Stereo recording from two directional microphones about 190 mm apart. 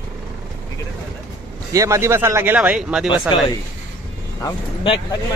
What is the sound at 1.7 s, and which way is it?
Speech, 15° right (ahead or behind).